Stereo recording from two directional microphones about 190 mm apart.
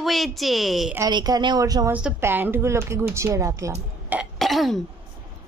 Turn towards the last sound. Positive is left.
turn(degrees=0)  # may be behind; listen again after turning